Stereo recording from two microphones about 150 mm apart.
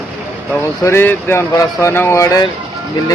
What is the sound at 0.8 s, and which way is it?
A man's voice, 15° left (ahead or behind).